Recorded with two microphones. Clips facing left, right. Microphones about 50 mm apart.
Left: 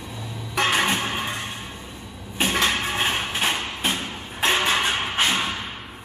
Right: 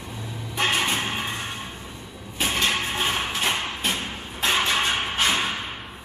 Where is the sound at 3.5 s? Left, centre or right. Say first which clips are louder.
Even; centre.